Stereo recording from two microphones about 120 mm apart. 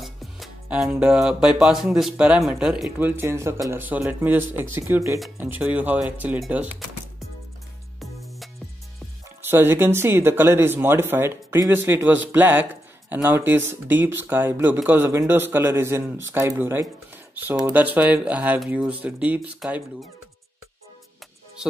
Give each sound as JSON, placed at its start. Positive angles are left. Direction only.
{"t": 0.0, "sound": "speech", "side_deg": 0}
{"t": 8.0, "sound": "music", "side_deg": 0}
{"t": 9.4, "sound": "speech", "side_deg": -20}
{"t": 17.1, "sound": "a sound", "side_deg": -15}
{"t": 17.7, "sound": "speech", "side_deg": -15}